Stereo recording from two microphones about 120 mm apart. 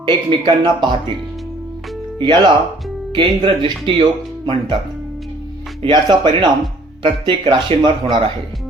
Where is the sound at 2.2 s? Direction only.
40° right (ahead or behind).